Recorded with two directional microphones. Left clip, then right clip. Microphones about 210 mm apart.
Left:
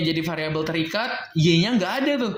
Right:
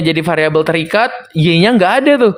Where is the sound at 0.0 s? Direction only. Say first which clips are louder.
Right 12 dB; 45° right (ahead or behind).